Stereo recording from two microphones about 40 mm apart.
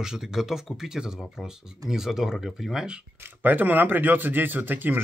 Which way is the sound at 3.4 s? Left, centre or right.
Right.